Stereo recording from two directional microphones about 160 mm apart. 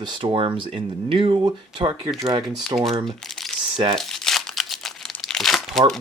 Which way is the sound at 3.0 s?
Centre (ahead or behind).